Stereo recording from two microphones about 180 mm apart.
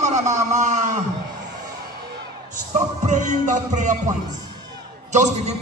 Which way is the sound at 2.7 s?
40° right (ahead or behind).